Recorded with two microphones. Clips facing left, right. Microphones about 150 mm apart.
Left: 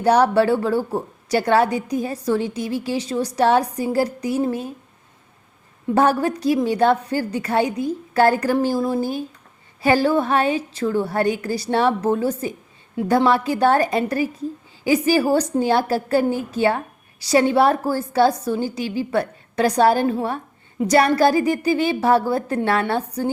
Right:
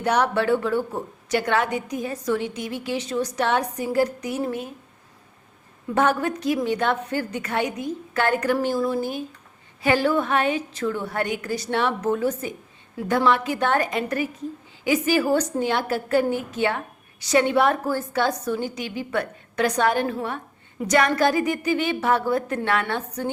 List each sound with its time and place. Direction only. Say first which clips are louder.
0.0 s a woman's voice: left 6 dB; 35° left (ahead or behind)
5.9 s a woman's voice: left 4 dB; 35° left (ahead or behind)